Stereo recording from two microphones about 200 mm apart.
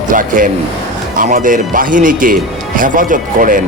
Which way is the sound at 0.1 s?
40° right (ahead or behind).